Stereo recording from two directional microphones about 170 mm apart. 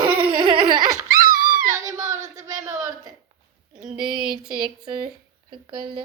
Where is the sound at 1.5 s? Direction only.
55° right (ahead or behind).